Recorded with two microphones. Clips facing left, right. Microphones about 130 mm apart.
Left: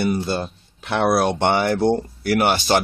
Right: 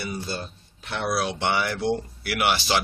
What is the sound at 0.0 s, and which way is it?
Speech, 60° left (ahead or behind).